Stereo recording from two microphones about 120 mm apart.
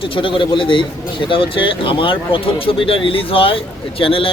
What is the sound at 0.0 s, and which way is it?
A man's voice, 45° left (ahead or behind).